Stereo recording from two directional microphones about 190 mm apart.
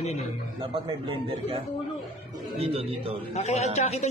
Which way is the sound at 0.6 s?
25° right (ahead or behind).